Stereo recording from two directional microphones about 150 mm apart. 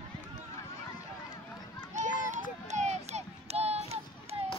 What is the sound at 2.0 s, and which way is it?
Children playing, 55° right (ahead or behind).